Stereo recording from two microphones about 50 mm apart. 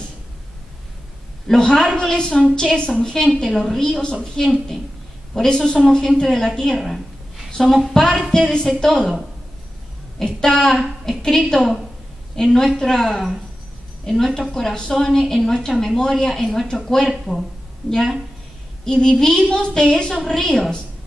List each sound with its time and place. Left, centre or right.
1.5 s speech: centre
4.4 s a woman's voice: centre
10.1 s a woman's voice: centre
17.1 s a woman's voice: centre
18.9 s speech: centre